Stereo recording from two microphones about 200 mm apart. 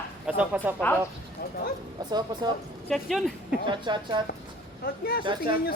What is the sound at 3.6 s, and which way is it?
Speech, 25° right (ahead or behind).